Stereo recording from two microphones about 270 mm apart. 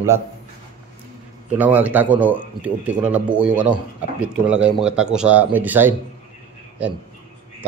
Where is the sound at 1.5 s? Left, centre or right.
Centre.